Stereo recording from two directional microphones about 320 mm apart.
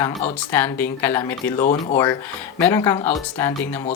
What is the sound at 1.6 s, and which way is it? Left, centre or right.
Speech, left.